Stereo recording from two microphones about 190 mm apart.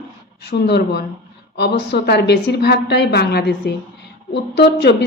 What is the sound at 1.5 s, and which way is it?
Speech, 60° left (ahead or behind).